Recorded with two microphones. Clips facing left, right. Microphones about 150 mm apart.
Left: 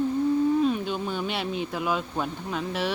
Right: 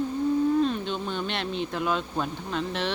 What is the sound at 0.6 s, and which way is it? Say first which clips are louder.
Speech: left 1 dB; 10° left (ahead or behind).